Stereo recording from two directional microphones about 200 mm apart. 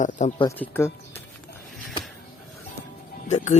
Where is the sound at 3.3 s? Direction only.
35° left (ahead or behind).